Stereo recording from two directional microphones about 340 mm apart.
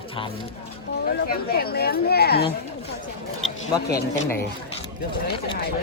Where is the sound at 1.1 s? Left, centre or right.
Left.